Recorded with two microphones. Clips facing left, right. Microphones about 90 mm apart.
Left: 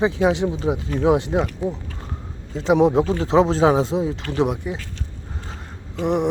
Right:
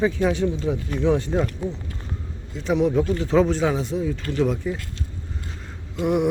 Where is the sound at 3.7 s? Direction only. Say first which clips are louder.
Left 5 dB; 90° left.